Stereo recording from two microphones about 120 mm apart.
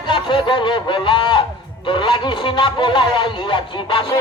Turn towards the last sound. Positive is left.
turn(degrees=35)  # may be behind; listen again after turning